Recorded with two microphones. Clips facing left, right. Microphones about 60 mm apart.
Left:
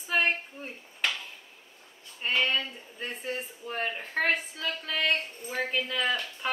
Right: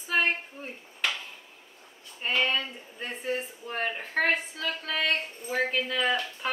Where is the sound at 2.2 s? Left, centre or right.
Centre.